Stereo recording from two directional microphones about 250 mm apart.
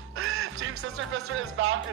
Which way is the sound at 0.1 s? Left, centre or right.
Right.